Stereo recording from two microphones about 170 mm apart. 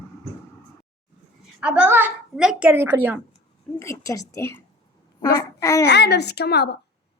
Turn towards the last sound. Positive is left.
turn(degrees=75)  # may be behind; listen again after turning